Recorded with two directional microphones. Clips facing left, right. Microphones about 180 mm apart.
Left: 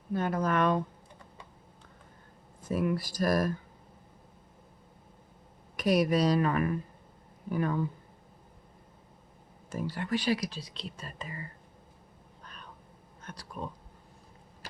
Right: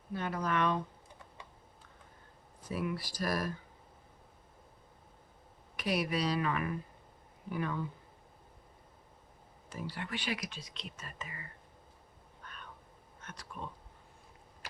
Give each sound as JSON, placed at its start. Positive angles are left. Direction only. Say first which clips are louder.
{"t": 0.1, "sound": "speech", "louder": "left 6 dB", "side_deg": 45}
{"t": 2.6, "sound": "speech", "louder": "left 7 dB", "side_deg": 45}
{"t": 5.7, "sound": "speech", "louder": "left 8 dB", "side_deg": 45}
{"t": 9.6, "sound": "speech", "louder": "left 7 dB", "side_deg": 45}
{"t": 12.4, "sound": "a sound", "louder": "left 1 dB", "side_deg": 35}